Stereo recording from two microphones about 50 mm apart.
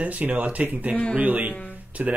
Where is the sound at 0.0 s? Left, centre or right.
Right.